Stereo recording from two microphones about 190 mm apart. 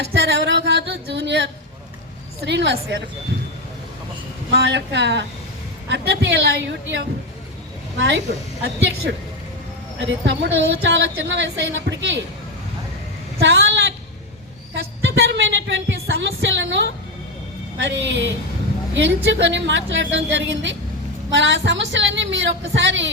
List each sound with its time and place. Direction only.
0.0 s a sound: 60° right (ahead or behind)
2.4 s speech: 60° right (ahead or behind)
4.5 s a woman's voice: 65° right (ahead or behind)
10.1 s a woman's voice: 75° right (ahead or behind)
13.4 s a woman's voice: 65° right (ahead or behind)
14.8 s a sound: 65° right (ahead or behind)
17.7 s a woman's voice: 75° right (ahead or behind)